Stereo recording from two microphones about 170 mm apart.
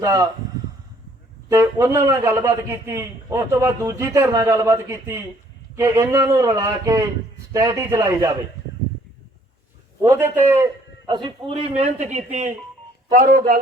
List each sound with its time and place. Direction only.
0.0 s a man's voice: 20° right (ahead or behind)
1.5 s a man's voice: 15° right (ahead or behind)
10.0 s a man's voice: 15° right (ahead or behind)
11.1 s a man's voice: 25° right (ahead or behind); by 12.5 s 45° right (ahead or behind)
13.1 s speech: 55° right (ahead or behind)